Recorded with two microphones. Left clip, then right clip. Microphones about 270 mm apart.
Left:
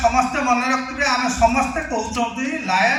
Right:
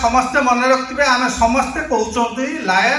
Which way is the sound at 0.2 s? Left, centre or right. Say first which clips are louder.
Right 4 dB; centre.